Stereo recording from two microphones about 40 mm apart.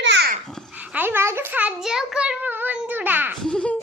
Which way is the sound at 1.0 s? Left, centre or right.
Right.